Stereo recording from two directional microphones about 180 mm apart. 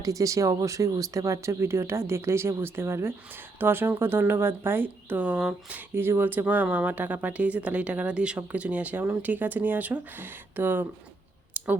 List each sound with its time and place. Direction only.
0.0 s speech: 20° right (ahead or behind)
11.5 s clicking: 10° right (ahead or behind)